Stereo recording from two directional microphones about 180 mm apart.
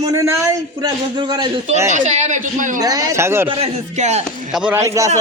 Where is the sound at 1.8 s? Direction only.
40° right (ahead or behind).